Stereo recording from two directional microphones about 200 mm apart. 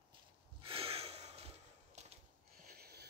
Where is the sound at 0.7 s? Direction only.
30° right (ahead or behind).